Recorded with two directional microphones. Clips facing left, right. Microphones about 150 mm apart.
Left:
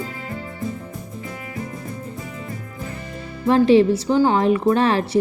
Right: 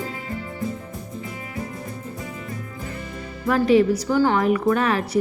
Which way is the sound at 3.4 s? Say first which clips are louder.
Left 3 dB; 30° left (ahead or behind).